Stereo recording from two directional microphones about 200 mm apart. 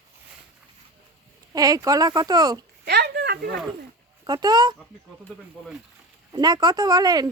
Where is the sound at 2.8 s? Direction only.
55° right (ahead or behind).